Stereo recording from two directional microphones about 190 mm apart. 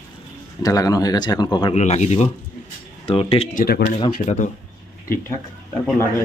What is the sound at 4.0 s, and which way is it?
Speech, 40° left (ahead or behind).